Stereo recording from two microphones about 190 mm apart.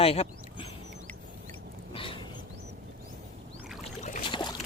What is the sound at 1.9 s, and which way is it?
Wild animals, 30° left (ahead or behind).